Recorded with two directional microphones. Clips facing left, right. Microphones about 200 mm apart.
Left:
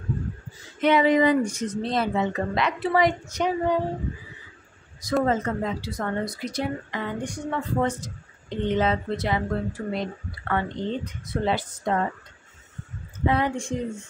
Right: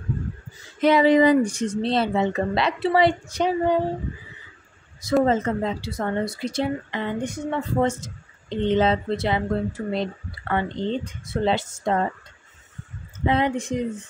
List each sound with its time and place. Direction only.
0.7 s speech: 35° right (ahead or behind)
5.2 s speech: 25° right (ahead or behind)
13.2 s speech: 20° right (ahead or behind)